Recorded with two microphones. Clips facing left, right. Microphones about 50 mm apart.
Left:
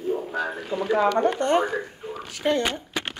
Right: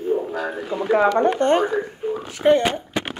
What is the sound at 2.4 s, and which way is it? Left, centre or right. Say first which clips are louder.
Speech: right 7 dB; right.